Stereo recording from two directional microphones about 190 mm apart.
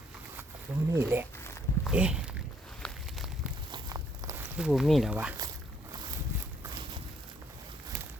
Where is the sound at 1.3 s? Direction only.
15° left (ahead or behind).